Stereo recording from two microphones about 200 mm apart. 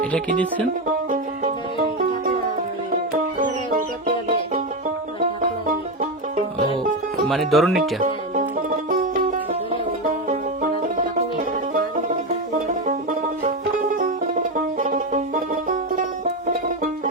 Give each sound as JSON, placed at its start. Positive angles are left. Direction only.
{"t": 3.3, "sound": "music", "side_deg": -40}
{"t": 5.6, "sound": "music", "side_deg": -40}
{"t": 7.3, "sound": "speech", "side_deg": 0}
{"t": 8.0, "sound": "music", "side_deg": -45}
{"t": 16.5, "sound": "music", "side_deg": -45}